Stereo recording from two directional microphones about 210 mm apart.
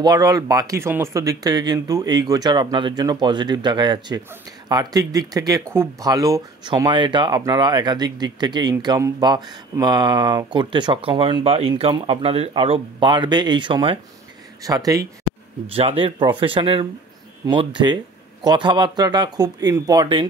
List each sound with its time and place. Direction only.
0.0 s speech: 15° right (ahead or behind)
15.6 s speech: 30° right (ahead or behind)